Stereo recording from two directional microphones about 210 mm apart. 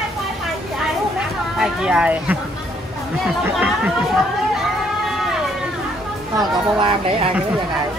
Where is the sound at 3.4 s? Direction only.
5° right (ahead or behind).